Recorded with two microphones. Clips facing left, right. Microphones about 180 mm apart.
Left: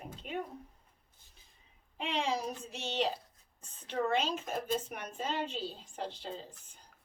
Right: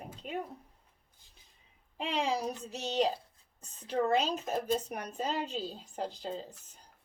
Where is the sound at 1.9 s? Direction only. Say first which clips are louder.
Right 2 dB; 35° right (ahead or behind).